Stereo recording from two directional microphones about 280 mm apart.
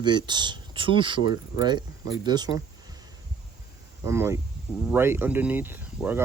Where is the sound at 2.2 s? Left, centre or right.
Centre.